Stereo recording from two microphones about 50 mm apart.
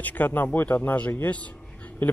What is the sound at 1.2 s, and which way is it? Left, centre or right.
Speech, left.